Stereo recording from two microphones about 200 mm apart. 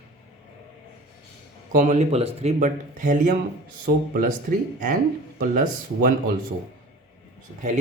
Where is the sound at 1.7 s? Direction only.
40° right (ahead or behind).